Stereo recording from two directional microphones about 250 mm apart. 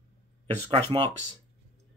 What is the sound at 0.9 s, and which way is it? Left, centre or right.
Speech, right.